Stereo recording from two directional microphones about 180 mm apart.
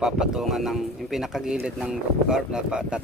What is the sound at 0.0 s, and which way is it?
Speech, 5° right (ahead or behind).